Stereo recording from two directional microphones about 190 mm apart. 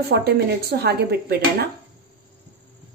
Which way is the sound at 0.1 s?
55° right (ahead or behind).